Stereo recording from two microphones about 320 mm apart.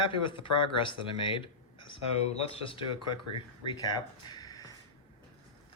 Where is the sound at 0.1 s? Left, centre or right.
Centre.